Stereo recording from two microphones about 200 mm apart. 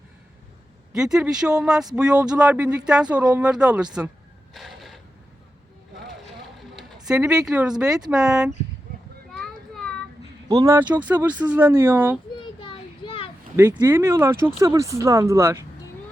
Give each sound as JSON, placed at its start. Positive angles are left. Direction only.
{"t": 0.9, "sound": "speech", "side_deg": -5}
{"t": 4.5, "sound": "a sound", "side_deg": 0}
{"t": 6.6, "sound": "speech", "side_deg": 0}
{"t": 9.4, "sound": "child singing", "side_deg": 5}
{"t": 10.5, "sound": "speech", "side_deg": -15}
{"t": 12.4, "sound": "a sound", "side_deg": 25}
{"t": 13.6, "sound": "speech", "side_deg": -15}